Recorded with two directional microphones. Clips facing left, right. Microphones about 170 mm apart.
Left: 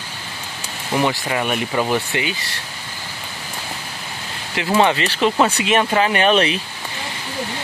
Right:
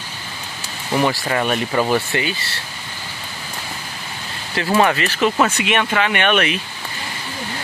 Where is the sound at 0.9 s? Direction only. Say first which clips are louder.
Right 1 dB; 15° left (ahead or behind).